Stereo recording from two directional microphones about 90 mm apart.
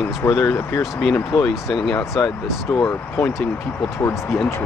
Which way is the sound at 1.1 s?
30° left (ahead or behind).